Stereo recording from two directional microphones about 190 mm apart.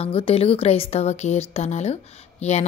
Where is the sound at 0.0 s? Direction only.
30° left (ahead or behind).